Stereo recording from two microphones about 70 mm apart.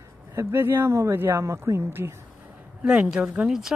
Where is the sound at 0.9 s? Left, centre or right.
Right.